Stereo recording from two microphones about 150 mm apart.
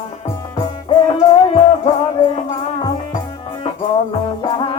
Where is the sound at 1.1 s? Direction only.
40° left (ahead or behind).